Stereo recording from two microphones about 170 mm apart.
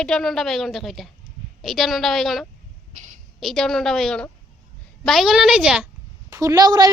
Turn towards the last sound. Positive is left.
turn(degrees=-25)  # may be behind; listen again after turning